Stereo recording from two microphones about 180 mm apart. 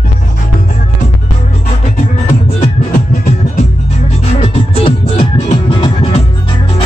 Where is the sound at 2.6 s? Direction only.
40° left (ahead or behind).